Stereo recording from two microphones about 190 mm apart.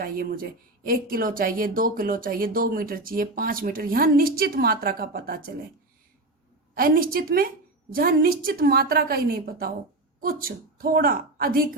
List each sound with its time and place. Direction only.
0.0 s speech: 50° right (ahead or behind)
6.7 s a woman's voice: 50° right (ahead or behind)